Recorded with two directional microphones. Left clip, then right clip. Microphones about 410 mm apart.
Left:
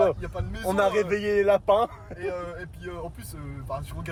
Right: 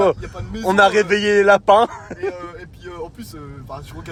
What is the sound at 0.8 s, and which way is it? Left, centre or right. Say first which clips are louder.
A man's voice: right 10 dB; centre.